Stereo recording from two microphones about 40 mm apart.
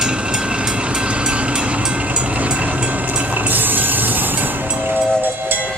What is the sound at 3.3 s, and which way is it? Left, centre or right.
Train, right.